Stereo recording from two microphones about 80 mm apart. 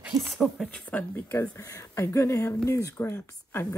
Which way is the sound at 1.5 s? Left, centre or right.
Left.